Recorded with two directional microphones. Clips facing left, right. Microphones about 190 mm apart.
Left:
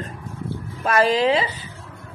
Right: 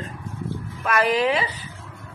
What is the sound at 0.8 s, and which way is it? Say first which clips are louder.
Speech: left 3 dB; 30° left (ahead or behind).